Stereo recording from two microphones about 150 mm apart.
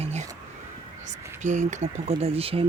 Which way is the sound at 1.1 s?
55° right (ahead or behind).